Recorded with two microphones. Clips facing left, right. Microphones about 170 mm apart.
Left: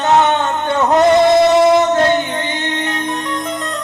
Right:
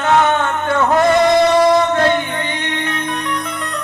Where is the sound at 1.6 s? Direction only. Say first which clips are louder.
Left 2 dB; 20° left (ahead or behind).